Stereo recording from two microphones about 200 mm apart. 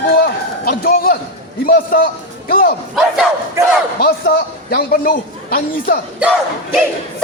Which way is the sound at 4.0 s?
50° left (ahead or behind).